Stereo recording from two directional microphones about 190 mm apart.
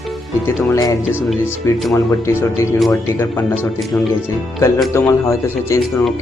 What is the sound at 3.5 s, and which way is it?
Speech, centre (ahead or behind).